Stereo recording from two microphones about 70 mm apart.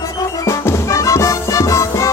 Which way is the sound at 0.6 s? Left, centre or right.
Left.